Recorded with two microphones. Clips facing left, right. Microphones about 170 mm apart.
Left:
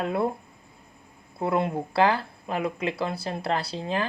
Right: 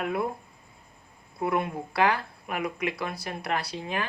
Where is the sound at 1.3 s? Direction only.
25° left (ahead or behind).